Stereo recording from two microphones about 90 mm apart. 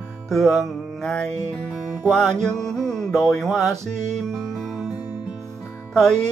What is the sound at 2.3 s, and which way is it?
Music, 30° right (ahead or behind).